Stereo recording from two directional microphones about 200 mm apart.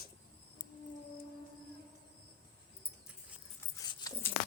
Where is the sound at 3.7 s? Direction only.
20° left (ahead or behind).